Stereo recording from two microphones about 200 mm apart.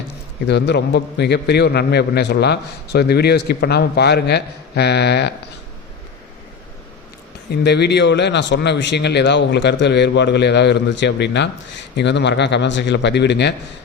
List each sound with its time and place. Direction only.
0.4 s a man's voice: 60° left (ahead or behind)
7.5 s a man's voice: 55° left (ahead or behind)